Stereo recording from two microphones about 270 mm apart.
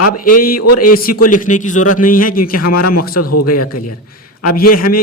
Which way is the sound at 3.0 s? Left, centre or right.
Left.